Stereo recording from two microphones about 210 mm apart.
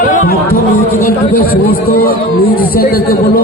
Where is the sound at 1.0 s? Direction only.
45° left (ahead or behind).